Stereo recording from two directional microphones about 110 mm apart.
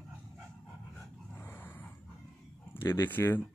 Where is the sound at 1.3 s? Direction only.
15° left (ahead or behind).